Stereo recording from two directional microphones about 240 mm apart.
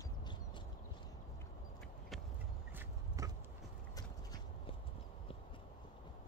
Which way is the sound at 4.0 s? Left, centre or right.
Centre.